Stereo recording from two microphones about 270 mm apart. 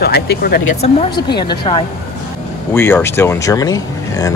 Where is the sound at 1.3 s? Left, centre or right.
Centre.